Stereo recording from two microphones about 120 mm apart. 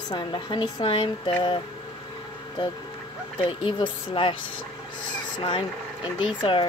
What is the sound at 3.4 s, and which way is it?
Speech, 45° left (ahead or behind).